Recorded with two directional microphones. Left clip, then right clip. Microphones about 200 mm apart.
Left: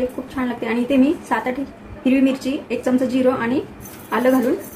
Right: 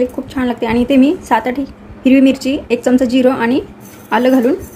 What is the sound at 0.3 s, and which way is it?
A woman's voice, 55° right (ahead or behind).